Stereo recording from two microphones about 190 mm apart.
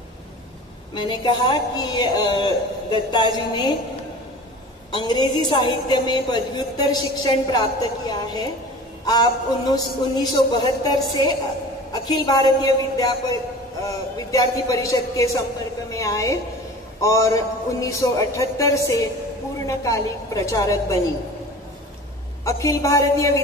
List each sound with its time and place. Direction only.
0.9 s a woman's voice: 25° left (ahead or behind)
4.9 s a woman's voice: 25° left (ahead or behind)
22.4 s speech: 15° left (ahead or behind)